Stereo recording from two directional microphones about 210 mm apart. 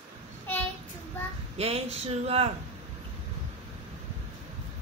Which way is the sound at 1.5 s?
30° right (ahead or behind).